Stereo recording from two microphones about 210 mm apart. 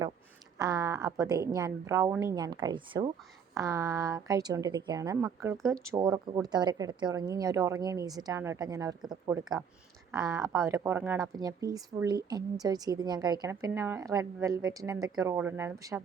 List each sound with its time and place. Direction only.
0.6 s a woman's voice: 15° right (ahead or behind)